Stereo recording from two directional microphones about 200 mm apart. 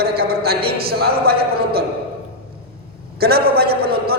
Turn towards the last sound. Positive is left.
turn(degrees=-50)  # may be behind; listen again after turning